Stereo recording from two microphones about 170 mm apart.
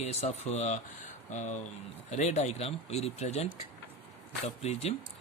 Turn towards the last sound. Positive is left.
turn(degrees=40)  # may be behind; listen again after turning